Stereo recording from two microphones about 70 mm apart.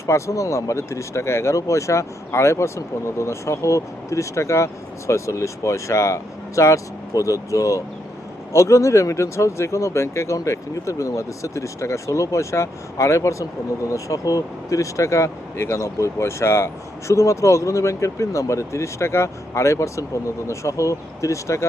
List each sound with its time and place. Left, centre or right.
0.0 s speech: left